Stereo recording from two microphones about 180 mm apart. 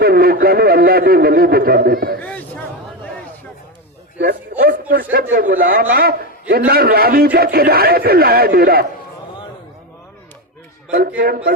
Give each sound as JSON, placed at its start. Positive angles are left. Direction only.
{"t": 0.0, "sound": "a man's voice", "side_deg": -60}
{"t": 2.2, "sound": "a sound", "side_deg": 10}
{"t": 4.2, "sound": "a man's voice", "side_deg": -60}
{"t": 11.2, "sound": "a man's voice", "side_deg": -55}